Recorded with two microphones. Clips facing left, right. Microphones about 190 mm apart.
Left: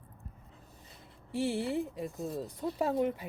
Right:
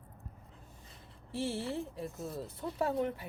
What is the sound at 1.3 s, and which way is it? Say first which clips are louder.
Speech: left 4 dB; 15° left (ahead or behind).